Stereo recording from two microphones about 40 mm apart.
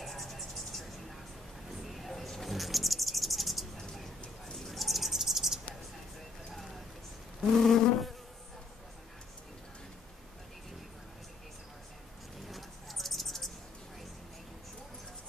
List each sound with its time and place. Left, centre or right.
0.0 s music: centre
1.7 s bird: centre
4.6 s cricket: centre
6.5 s a sound: centre
7.6 s insect: centre
12.4 s a sound: centre